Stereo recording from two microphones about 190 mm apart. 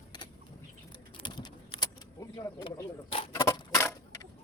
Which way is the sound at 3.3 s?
15° left (ahead or behind).